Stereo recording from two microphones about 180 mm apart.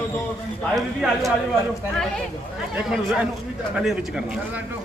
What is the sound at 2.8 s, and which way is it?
Speech, centre (ahead or behind).